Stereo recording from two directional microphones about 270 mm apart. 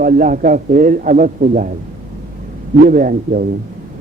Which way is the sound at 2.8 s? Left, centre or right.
Right.